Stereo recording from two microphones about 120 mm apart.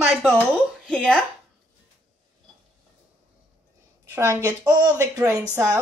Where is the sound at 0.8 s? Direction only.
5° left (ahead or behind).